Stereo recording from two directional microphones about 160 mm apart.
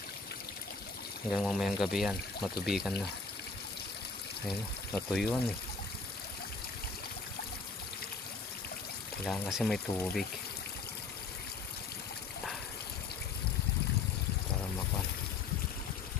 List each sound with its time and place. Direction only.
1.3 s speech: centre (ahead or behind)
4.4 s speech: 5° left (ahead or behind)
9.3 s speech: centre (ahead or behind)